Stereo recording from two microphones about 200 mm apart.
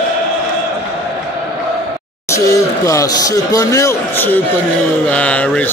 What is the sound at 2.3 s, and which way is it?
Speech, 15° left (ahead or behind).